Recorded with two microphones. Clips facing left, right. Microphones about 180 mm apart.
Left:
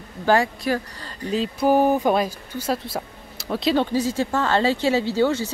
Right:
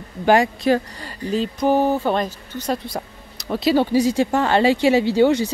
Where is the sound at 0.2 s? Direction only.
20° right (ahead or behind).